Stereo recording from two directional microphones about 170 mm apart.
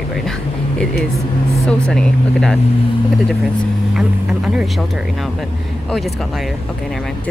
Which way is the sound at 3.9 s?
5° right (ahead or behind).